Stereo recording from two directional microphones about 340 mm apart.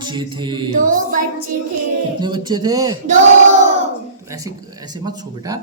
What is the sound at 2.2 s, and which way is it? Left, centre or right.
Speech, centre.